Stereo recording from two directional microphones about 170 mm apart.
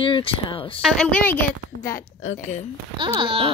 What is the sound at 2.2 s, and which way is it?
Speech, 45° left (ahead or behind).